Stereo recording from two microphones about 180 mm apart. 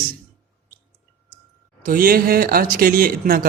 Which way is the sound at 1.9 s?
50° right (ahead or behind).